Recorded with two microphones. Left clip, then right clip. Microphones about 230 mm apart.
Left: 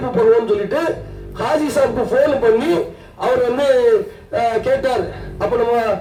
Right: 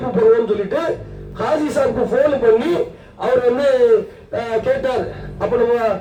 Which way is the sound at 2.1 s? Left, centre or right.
Left.